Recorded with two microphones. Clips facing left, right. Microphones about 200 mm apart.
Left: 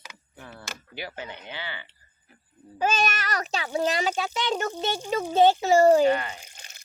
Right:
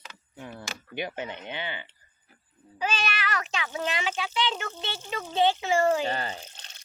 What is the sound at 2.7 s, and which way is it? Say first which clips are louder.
A child's voice: left 5 dB; 45° left (ahead or behind).